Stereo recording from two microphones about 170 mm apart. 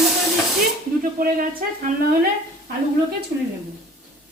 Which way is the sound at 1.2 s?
55° right (ahead or behind).